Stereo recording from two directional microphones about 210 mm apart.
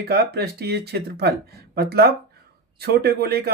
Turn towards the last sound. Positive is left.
turn(degrees=-50)  # may be behind; listen again after turning